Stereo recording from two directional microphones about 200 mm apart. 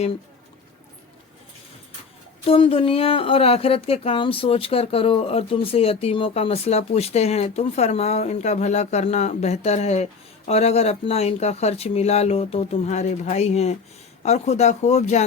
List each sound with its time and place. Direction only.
2.4 s speech: 30° left (ahead or behind)